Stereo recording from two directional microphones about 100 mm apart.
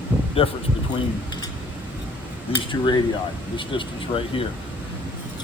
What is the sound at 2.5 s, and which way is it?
Speech, 55° left (ahead or behind).